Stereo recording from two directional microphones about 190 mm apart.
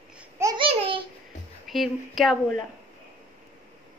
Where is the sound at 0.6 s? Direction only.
30° right (ahead or behind).